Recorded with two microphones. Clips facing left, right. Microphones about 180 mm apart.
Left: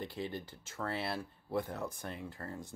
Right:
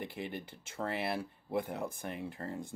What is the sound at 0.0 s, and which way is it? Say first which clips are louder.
Speech: even; 15° right (ahead or behind).